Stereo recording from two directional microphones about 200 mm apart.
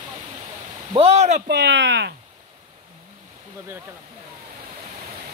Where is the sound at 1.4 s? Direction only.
55° right (ahead or behind).